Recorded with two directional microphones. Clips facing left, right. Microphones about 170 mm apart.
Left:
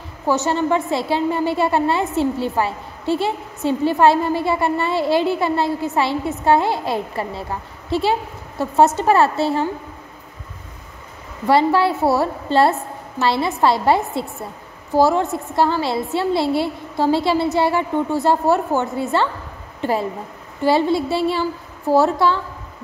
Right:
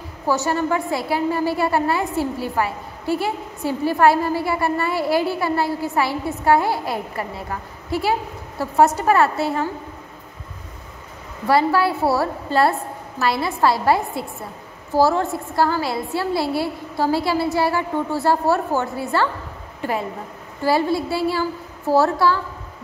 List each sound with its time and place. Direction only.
0.3 s a woman's voice: 20° left (ahead or behind)
11.4 s a woman's voice: 25° left (ahead or behind)
19.8 s a woman's voice: 30° left (ahead or behind)